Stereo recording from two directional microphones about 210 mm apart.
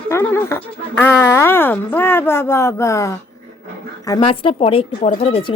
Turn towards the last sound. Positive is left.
turn(degrees=30)  # may be behind; listen again after turning